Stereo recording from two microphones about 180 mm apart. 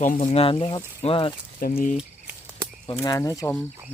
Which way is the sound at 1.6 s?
50° left (ahead or behind).